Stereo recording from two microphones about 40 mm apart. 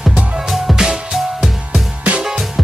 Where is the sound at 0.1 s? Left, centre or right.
Right.